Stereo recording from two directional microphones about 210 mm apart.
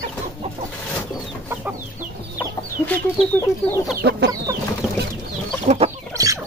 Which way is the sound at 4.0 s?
50° right (ahead or behind).